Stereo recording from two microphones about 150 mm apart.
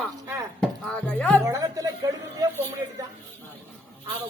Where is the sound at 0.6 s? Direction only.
5° left (ahead or behind).